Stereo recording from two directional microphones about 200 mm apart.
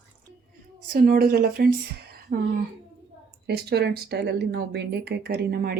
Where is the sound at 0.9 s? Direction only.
50° right (ahead or behind).